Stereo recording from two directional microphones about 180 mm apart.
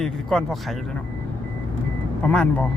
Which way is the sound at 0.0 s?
Centre (ahead or behind).